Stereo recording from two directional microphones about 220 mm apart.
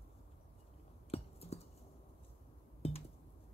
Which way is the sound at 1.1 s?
30° left (ahead or behind).